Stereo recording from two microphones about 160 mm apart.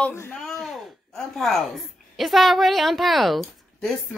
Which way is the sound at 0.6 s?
Centre (ahead or behind).